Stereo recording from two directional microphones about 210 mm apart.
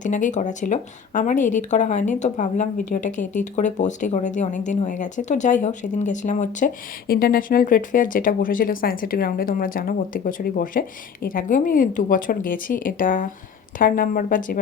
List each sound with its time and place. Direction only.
0.0 s speech: 35° left (ahead or behind)